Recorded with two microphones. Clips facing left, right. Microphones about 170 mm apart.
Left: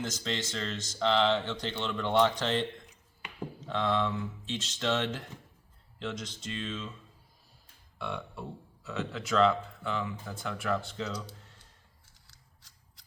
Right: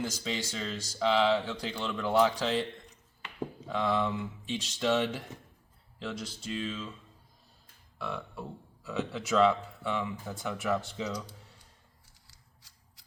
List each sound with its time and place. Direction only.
0.0 s speech: 10° right (ahead or behind)
3.7 s speech: 5° right (ahead or behind)
7.9 s speech: centre (ahead or behind)
12.3 s scissors: 5° right (ahead or behind)